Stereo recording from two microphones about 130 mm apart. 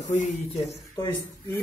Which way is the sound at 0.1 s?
65° left (ahead or behind).